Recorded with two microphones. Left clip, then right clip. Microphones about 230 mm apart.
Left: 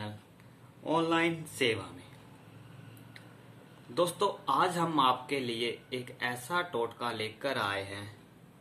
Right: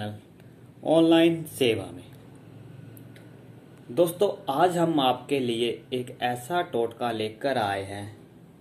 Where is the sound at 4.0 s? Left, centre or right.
Centre.